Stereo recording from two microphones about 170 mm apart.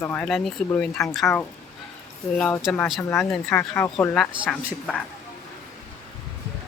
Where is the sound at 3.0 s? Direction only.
15° left (ahead or behind).